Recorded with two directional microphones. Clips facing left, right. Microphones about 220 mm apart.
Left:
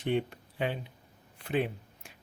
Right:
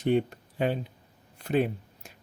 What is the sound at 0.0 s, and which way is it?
Speech, 40° right (ahead or behind).